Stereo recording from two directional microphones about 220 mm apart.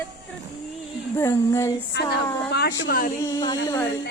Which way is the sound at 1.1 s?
15° left (ahead or behind).